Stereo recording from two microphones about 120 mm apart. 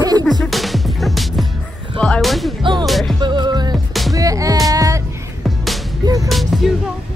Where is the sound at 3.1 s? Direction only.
40° right (ahead or behind).